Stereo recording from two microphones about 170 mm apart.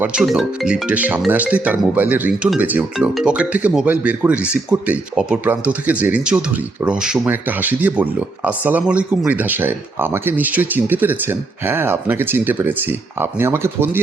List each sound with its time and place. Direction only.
0.0 s speech: 5° right (ahead or behind)